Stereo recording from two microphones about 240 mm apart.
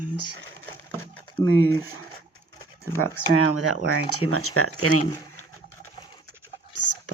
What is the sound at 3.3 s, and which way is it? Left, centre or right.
Speech, left.